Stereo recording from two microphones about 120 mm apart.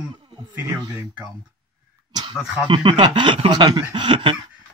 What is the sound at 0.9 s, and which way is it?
Speech, 10° right (ahead or behind).